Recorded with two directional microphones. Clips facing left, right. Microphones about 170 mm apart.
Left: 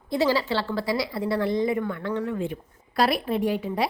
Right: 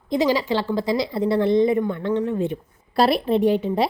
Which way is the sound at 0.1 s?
15° right (ahead or behind).